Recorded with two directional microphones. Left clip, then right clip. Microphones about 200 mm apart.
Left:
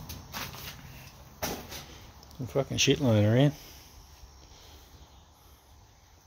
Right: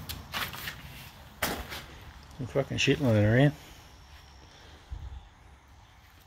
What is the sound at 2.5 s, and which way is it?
Speech, 10° left (ahead or behind).